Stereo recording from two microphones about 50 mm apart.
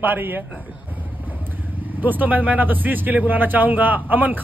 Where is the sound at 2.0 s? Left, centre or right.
Right.